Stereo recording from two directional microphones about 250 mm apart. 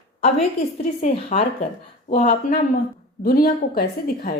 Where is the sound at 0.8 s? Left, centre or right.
Left.